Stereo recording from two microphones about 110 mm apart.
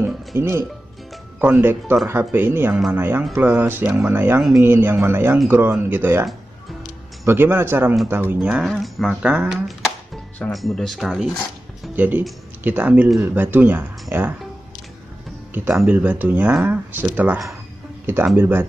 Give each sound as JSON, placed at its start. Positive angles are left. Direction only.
{"t": 0.3, "sound": "speech", "side_deg": -25}
{"t": 7.2, "sound": "speech", "side_deg": -20}
{"t": 8.6, "sound": "speech", "side_deg": 0}
{"t": 9.2, "sound": "speech", "side_deg": -10}
{"t": 10.5, "sound": "speech", "side_deg": 0}
{"t": 11.9, "sound": "speech", "side_deg": -15}
{"t": 15.7, "sound": "speech", "side_deg": -10}